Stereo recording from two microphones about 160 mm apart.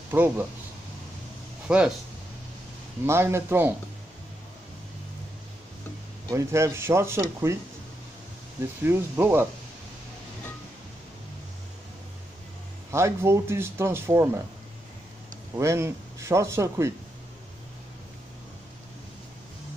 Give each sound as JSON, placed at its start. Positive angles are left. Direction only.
{"t": 0.1, "sound": "speech", "side_deg": -15}
{"t": 1.7, "sound": "speech", "side_deg": -5}
{"t": 3.1, "sound": "speech", "side_deg": -15}
{"t": 6.3, "sound": "speech", "side_deg": -15}
{"t": 8.8, "sound": "speech", "side_deg": -15}
{"t": 12.9, "sound": "speech", "side_deg": -15}
{"t": 15.5, "sound": "speech", "side_deg": -20}